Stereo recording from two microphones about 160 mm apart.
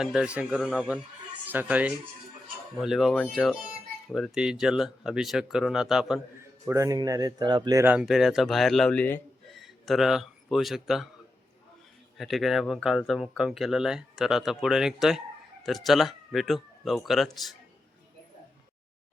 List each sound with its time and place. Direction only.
0.0 s speech: 5° right (ahead or behind)
6.4 s a man's voice: 20° right (ahead or behind)
7.9 s speech: 5° right (ahead or behind)
12.1 s speech: centre (ahead or behind)